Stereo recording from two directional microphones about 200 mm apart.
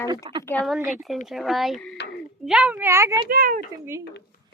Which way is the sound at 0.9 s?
Centre (ahead or behind).